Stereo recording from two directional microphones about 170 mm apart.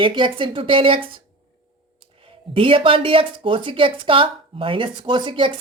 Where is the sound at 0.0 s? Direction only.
30° right (ahead or behind).